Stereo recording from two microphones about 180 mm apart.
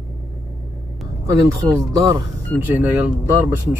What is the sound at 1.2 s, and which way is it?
Speech, 15° right (ahead or behind).